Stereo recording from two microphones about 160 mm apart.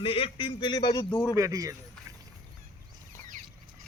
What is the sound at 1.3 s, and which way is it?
Speech, 20° right (ahead or behind).